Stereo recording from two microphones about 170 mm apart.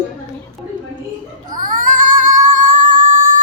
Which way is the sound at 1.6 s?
55° right (ahead or behind).